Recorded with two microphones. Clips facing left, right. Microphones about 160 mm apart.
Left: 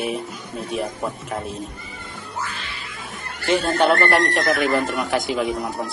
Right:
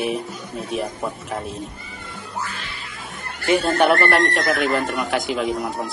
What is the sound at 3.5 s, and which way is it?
Speech, 10° right (ahead or behind).